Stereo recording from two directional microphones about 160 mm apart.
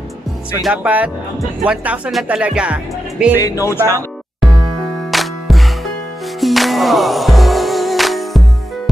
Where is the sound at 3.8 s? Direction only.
15° right (ahead or behind).